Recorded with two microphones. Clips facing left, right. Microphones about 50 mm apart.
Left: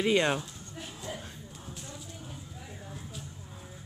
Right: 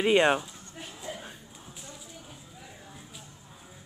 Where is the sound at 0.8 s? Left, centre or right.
Centre.